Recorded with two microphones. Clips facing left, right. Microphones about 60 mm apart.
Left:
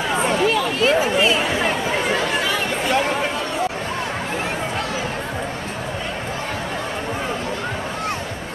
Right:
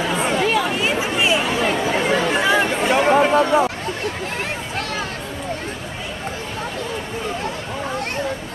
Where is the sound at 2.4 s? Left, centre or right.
Centre.